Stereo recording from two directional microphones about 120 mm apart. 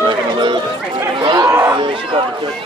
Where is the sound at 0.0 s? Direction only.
40° right (ahead or behind).